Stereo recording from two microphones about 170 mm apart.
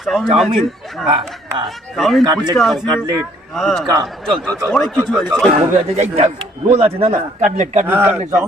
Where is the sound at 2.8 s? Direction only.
20° right (ahead or behind).